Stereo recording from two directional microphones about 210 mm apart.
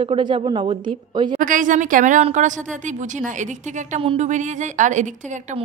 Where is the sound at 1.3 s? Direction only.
40° right (ahead or behind).